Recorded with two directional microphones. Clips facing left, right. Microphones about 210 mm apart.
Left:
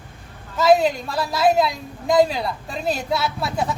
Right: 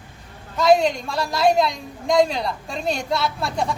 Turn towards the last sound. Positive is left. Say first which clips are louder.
# even
turn(degrees=5)  # may be behind; listen again after turning